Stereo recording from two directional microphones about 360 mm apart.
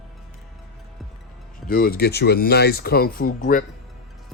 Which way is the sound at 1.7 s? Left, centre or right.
Left.